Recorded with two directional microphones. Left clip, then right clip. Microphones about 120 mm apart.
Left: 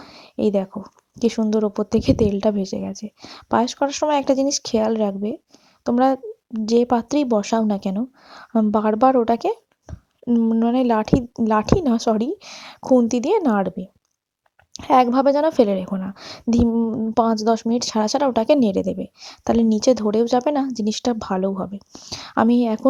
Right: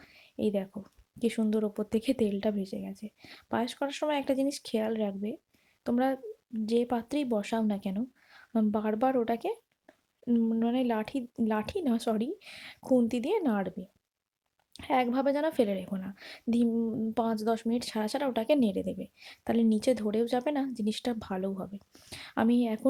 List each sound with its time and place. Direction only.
0.0 s a sound: 50° left (ahead or behind)
0.9 s a woman's voice: 35° left (ahead or behind)
9.8 s a sound: 30° left (ahead or behind)
10.7 s a woman's voice: 50° left (ahead or behind)
12.8 s speech: 30° left (ahead or behind)
13.1 s a woman's voice: 45° left (ahead or behind)
15.9 s a woman's voice: 35° left (ahead or behind)
16.6 s a woman's voice: 30° left (ahead or behind)
22.1 s a woman's voice: 45° left (ahead or behind)